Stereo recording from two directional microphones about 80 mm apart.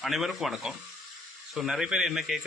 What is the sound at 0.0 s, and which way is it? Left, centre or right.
A man's voice, centre.